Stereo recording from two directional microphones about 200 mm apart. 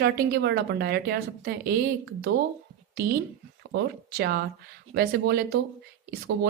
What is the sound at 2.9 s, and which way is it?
A woman's voice, 50° right (ahead or behind).